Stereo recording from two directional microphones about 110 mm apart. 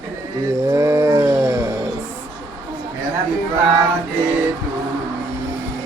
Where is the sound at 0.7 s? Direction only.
25° right (ahead or behind).